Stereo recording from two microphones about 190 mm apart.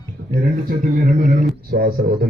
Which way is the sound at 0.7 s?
45° right (ahead or behind).